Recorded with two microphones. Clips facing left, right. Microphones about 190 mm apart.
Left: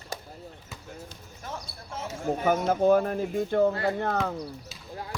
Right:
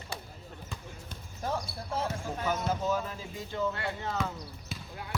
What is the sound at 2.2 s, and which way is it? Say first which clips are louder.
Speech: left 7 dB; 55° left (ahead or behind).